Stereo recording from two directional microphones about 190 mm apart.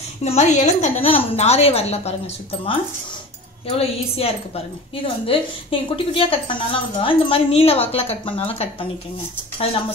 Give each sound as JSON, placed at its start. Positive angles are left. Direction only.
{"t": 0.2, "sound": "a woman's voice", "side_deg": 35}
{"t": 3.6, "sound": "a woman's voice", "side_deg": 30}